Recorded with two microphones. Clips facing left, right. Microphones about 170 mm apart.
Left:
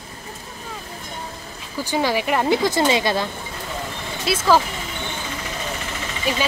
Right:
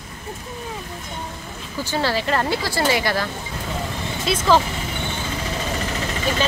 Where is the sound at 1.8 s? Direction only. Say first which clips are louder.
Left 2 dB; 15° left (ahead or behind).